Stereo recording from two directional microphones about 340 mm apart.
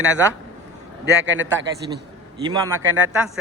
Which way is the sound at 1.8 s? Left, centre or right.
Centre.